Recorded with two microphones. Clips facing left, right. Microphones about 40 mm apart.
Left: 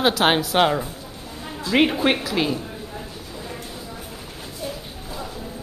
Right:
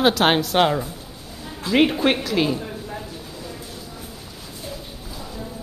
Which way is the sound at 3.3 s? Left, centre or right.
Left.